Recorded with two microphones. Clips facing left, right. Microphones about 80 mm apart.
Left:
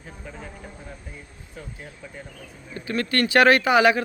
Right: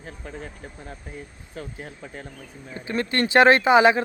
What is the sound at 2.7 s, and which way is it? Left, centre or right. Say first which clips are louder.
Speech: even; right.